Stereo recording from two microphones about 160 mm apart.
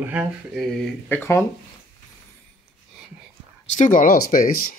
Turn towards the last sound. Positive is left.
turn(degrees=65)  # may be behind; listen again after turning